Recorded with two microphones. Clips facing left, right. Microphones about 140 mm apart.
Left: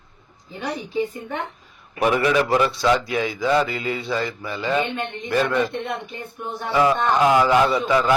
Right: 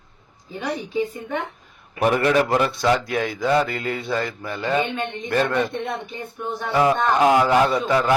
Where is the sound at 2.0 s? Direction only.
50° right (ahead or behind).